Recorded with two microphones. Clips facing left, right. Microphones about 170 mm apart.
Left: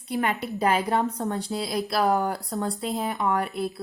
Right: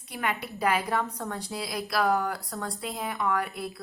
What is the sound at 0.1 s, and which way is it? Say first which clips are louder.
A woman's voice: left 6 dB; 30° left (ahead or behind).